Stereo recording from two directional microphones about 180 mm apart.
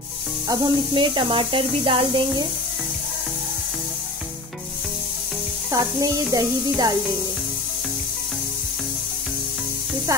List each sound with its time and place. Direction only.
0.5 s speech: 25° right (ahead or behind)
5.7 s speech: 20° right (ahead or behind)